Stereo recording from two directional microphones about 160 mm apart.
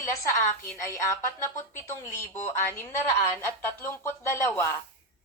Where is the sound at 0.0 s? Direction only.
20° left (ahead or behind).